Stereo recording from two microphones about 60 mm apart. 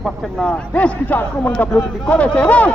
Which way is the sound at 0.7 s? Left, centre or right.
Left.